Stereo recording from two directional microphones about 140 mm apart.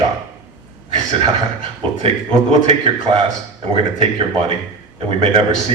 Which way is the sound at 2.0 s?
45° right (ahead or behind).